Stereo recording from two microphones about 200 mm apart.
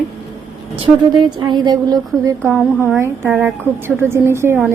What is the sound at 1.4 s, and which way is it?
A woman's voice, 20° right (ahead or behind).